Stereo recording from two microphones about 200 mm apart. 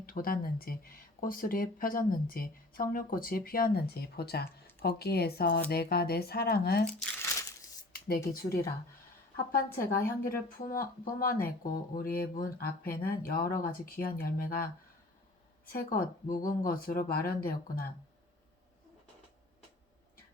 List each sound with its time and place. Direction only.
0.0 s speech: 45° left (ahead or behind)
6.9 s crumpling: 10° left (ahead or behind)
7.9 s a sound: 50° left (ahead or behind)
8.3 s a woman's voice: 50° left (ahead or behind)
9.8 s a woman's voice: 10° left (ahead or behind)
10.5 s speech: 45° left (ahead or behind)